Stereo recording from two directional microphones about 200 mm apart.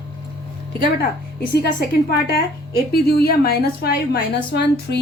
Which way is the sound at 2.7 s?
50° left (ahead or behind).